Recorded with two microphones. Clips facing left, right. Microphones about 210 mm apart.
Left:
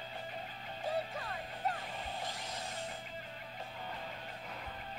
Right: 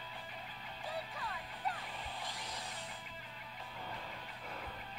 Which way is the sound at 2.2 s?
25° left (ahead or behind).